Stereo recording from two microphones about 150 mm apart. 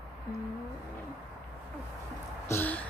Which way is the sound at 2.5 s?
15° left (ahead or behind).